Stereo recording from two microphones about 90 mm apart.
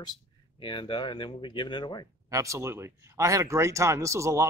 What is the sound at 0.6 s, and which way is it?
Speech, 65° left (ahead or behind).